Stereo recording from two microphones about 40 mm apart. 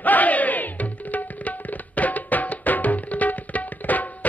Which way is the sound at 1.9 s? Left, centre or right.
Left.